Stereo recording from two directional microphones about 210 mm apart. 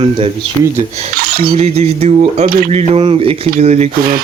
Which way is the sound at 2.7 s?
30° right (ahead or behind).